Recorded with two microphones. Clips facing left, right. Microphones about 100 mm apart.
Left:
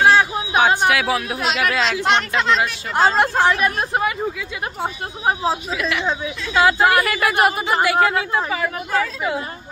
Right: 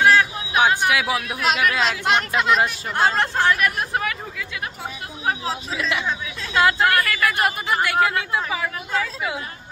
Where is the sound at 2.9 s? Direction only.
15° left (ahead or behind).